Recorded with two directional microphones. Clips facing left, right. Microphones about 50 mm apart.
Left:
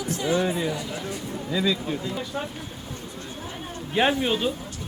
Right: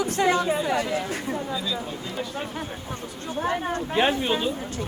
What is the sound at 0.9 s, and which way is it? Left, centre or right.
Speech, right.